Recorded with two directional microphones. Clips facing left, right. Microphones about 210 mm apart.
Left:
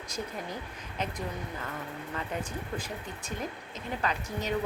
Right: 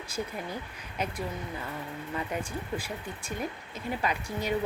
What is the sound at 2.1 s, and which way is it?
Speech, 10° right (ahead or behind).